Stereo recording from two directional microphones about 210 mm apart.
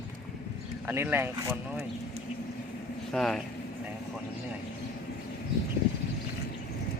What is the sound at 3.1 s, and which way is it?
Speech, centre (ahead or behind).